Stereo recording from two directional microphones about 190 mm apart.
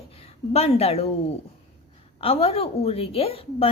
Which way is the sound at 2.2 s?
30° left (ahead or behind).